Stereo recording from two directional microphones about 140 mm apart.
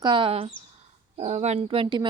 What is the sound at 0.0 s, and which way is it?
Speech, 35° right (ahead or behind).